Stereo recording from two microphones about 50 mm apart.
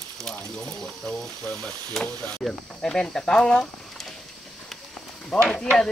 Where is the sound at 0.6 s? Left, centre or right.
Left.